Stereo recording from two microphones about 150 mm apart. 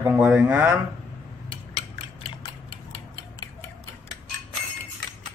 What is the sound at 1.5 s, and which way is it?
Scissors, 35° left (ahead or behind).